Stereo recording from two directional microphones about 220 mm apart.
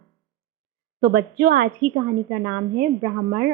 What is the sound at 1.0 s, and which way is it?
A woman's voice, 45° right (ahead or behind).